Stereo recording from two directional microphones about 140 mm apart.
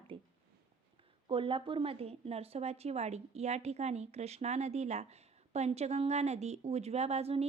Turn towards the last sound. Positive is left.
turn(degrees=-45)  # may be behind; listen again after turning